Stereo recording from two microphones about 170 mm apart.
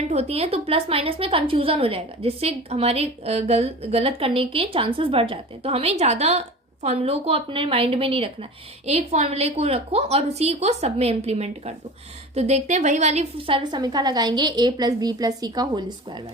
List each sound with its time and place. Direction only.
0.1 s a woman's voice: 40° right (ahead or behind)